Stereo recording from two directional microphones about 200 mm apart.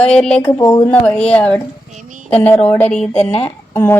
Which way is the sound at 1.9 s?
40° right (ahead or behind).